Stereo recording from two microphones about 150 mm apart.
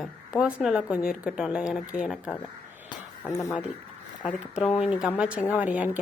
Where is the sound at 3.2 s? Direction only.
20° left (ahead or behind).